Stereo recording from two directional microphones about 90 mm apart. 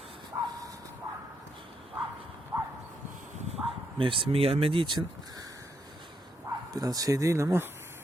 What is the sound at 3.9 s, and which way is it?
Speech, 75° right (ahead or behind).